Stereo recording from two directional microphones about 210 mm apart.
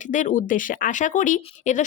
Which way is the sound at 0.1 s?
35° left (ahead or behind).